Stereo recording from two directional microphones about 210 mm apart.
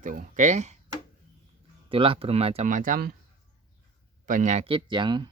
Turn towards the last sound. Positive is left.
turn(degrees=-20)  # may be behind; listen again after turning